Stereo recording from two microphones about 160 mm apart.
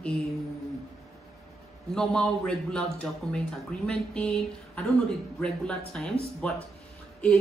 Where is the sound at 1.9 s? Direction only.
5° left (ahead or behind).